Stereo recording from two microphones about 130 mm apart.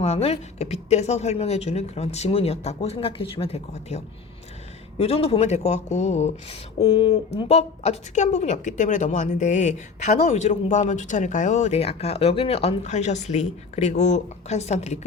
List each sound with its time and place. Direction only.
0.0 s speech: 50° left (ahead or behind)
6.7 s speech: 35° left (ahead or behind)
7.3 s speech: 50° left (ahead or behind)